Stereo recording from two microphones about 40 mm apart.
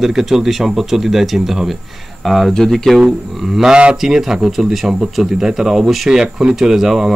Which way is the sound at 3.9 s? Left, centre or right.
Centre.